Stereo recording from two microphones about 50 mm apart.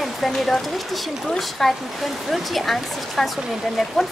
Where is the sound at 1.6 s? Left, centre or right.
Centre.